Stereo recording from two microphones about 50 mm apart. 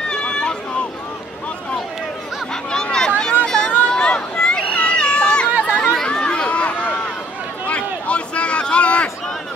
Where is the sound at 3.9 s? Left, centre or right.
Centre.